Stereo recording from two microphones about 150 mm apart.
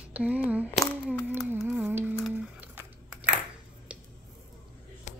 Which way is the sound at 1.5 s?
10° right (ahead or behind).